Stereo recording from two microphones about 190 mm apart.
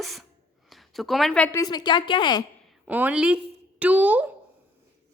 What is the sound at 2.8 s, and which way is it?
A woman's voice, 10° right (ahead or behind).